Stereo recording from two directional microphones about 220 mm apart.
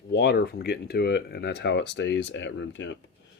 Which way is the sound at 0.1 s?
50° left (ahead or behind).